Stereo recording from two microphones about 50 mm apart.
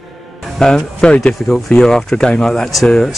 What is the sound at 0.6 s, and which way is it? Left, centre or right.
Speech, centre.